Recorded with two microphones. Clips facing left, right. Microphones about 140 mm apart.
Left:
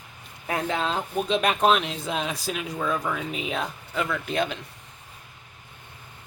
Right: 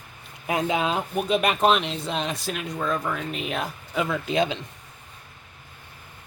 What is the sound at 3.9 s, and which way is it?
Speech, 20° right (ahead or behind).